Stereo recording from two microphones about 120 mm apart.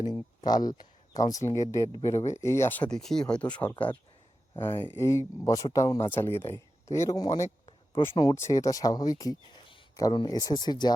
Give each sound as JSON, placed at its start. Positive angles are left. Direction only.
{"t": 0.0, "sound": "speech", "side_deg": 35}